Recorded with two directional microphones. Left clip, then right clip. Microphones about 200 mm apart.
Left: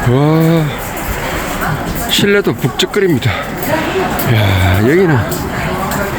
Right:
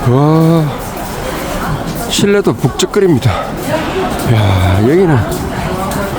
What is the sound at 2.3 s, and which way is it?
Speech, 10° right (ahead or behind).